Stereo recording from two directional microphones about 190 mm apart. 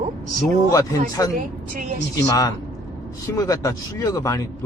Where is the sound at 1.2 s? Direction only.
20° left (ahead or behind).